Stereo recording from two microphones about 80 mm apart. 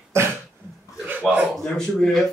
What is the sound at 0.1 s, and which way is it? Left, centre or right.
Cough, right.